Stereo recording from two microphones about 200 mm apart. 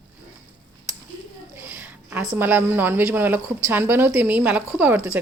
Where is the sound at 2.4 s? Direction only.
10° right (ahead or behind).